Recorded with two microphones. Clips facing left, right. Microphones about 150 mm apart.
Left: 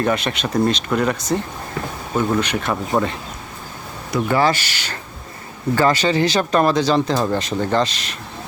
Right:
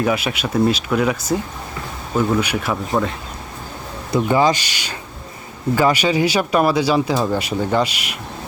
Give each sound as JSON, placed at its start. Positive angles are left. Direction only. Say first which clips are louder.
{"t": 0.0, "sound": "speech", "louder": "even", "side_deg": -5}
{"t": 3.0, "sound": "speech", "louder": "left 1 dB", "side_deg": 10}
{"t": 4.1, "sound": "speech", "louder": "right 2 dB", "side_deg": -15}